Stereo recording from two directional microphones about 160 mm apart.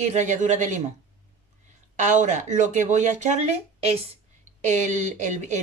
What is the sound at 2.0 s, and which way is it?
A woman's voice, 50° right (ahead or behind).